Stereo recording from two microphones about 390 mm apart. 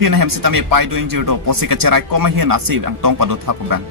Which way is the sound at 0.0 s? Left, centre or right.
Right.